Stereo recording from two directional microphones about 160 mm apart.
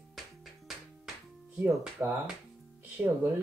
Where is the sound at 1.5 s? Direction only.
10° right (ahead or behind).